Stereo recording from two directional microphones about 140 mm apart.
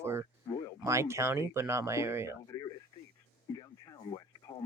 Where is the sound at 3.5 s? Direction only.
25° left (ahead or behind).